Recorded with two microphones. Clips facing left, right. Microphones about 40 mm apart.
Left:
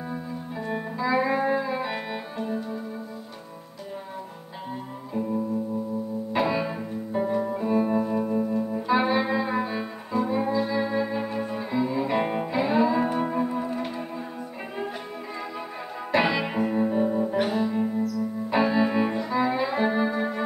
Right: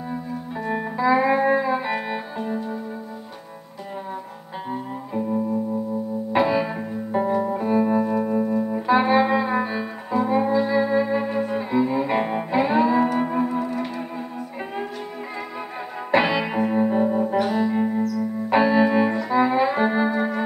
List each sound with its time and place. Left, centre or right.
0.6 s music: centre
6.5 s music: centre
11.4 s cello: right
12.2 s music: centre
12.4 s music: right
16.1 s music: right
18.1 s keyboard: right
19.2 s music: right
20.1 s keyboard: centre